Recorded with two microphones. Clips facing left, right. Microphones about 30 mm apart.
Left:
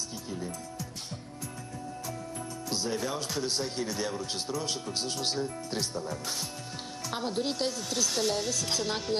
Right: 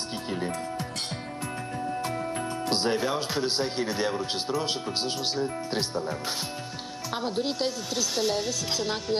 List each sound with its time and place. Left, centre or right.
2.6 s speech: right
3.0 s speech: right
5.2 s speech: centre
5.7 s speech: right
7.1 s speech: centre